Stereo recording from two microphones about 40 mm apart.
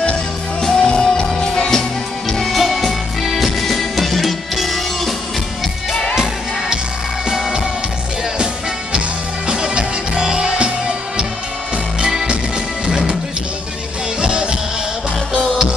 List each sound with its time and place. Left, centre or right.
0.7 s music: centre
2.2 s music: centre
7.2 s music: centre
9.5 s music: centre
12.0 s music: centre
14.2 s music: right